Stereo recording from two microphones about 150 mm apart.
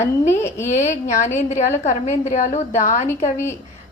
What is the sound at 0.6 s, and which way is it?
A woman's voice, 50° left (ahead or behind).